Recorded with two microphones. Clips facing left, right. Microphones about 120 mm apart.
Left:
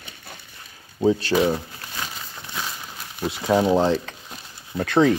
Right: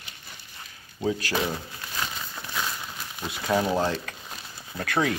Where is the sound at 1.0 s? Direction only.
25° left (ahead or behind).